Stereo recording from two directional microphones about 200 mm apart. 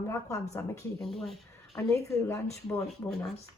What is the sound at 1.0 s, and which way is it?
Speech, centre (ahead or behind).